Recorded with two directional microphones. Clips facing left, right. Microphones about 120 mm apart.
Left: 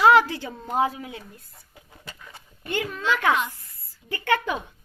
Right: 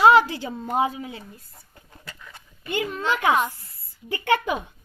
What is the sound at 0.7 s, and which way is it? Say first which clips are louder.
Speech: even; 5° right (ahead or behind).